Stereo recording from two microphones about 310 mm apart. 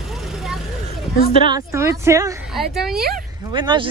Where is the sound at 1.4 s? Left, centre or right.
Centre.